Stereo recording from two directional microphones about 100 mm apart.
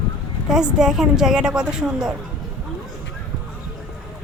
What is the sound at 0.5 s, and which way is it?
A woman's voice, 5° right (ahead or behind).